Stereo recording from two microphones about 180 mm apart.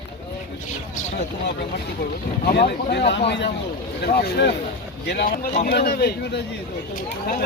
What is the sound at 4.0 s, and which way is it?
Speech, 60° left (ahead or behind).